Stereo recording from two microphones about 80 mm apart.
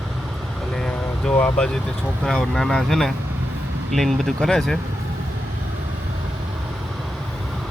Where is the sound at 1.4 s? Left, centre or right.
Left.